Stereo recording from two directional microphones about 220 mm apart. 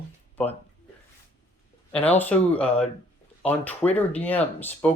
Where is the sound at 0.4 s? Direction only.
5° left (ahead or behind).